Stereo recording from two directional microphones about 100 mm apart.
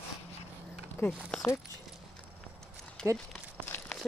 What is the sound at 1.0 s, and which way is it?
Speech, 25° left (ahead or behind).